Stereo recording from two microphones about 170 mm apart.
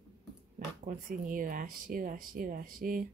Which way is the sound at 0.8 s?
50° right (ahead or behind).